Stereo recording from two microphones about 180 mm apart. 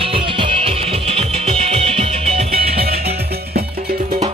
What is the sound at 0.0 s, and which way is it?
Music, 30° right (ahead or behind).